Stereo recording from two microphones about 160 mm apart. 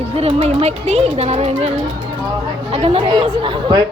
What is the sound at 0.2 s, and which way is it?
Speech, 40° right (ahead or behind).